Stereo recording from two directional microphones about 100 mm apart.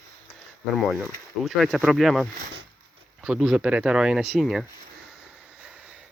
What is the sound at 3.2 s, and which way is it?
Speech, 5° right (ahead or behind).